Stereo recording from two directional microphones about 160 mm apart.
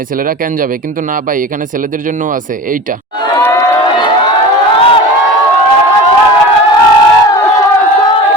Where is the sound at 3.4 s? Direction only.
25° left (ahead or behind).